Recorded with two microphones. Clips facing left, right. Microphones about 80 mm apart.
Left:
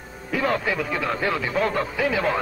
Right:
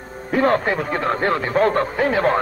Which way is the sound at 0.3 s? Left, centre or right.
Right.